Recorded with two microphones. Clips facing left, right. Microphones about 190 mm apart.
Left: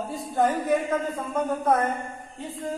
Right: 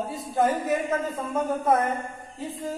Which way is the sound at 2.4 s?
Centre (ahead or behind).